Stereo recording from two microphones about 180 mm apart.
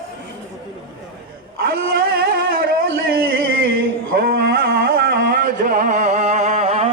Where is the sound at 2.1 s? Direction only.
55° right (ahead or behind).